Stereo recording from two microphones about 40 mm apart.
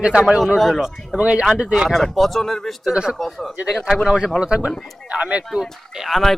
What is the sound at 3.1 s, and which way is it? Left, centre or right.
Speech, centre.